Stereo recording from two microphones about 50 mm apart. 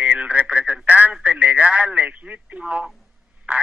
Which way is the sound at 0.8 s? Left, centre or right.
Right.